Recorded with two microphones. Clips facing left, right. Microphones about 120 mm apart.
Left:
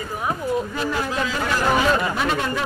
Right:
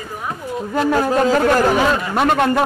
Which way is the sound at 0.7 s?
45° right (ahead or behind).